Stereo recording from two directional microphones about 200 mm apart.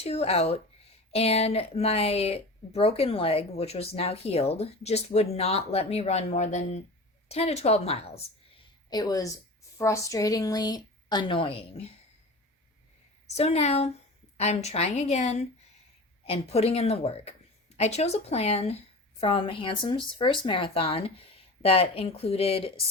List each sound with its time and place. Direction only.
0.0 s speech: 30° left (ahead or behind)
8.9 s a woman's voice: 20° left (ahead or behind)
13.3 s a woman's voice: 30° left (ahead or behind)